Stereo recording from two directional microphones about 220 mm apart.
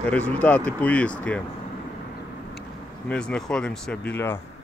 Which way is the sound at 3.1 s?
5° left (ahead or behind).